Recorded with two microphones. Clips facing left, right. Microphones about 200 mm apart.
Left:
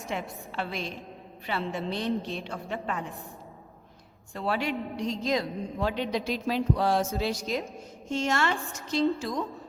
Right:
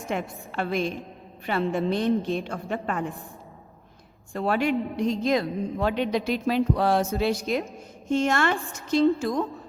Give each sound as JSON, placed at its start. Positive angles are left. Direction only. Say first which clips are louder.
{"t": 0.1, "sound": "a woman's voice", "louder": "right 4 dB", "side_deg": -50}
{"t": 4.4, "sound": "a woman's voice", "louder": "right 6 dB", "side_deg": -50}